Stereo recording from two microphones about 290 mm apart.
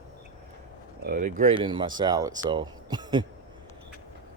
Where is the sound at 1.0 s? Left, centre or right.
Right.